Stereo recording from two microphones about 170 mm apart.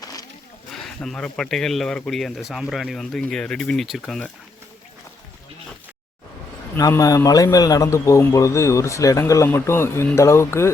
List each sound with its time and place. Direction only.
0.0 s a sound: 20° left (ahead or behind)
0.7 s speech: centre (ahead or behind)
6.7 s a man's voice: 20° left (ahead or behind)